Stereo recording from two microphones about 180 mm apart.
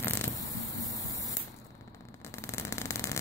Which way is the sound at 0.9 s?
20° left (ahead or behind).